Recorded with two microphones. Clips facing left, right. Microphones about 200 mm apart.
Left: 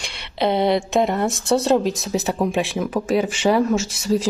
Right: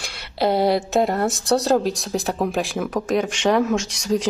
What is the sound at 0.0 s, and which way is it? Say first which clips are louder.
Speech: even; 5° right (ahead or behind).